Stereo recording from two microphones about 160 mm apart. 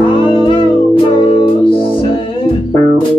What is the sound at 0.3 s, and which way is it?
Music, 35° left (ahead or behind).